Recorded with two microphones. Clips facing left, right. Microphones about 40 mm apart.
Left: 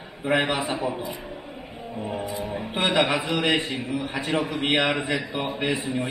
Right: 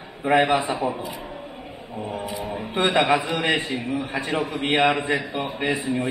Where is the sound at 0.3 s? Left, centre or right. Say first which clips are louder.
Right 4 dB; right.